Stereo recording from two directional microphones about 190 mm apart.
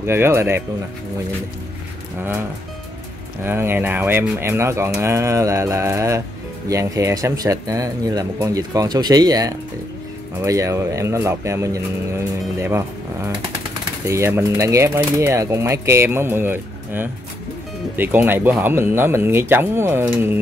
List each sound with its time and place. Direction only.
0.0 s speech: 15° right (ahead or behind)
3.4 s speech: 10° right (ahead or behind)